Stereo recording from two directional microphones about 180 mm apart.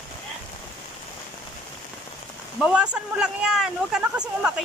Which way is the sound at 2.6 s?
5° right (ahead or behind).